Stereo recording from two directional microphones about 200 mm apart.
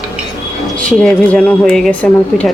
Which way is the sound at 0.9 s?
5° left (ahead or behind).